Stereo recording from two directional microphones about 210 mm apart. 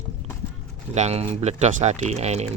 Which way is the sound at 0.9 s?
30° right (ahead or behind).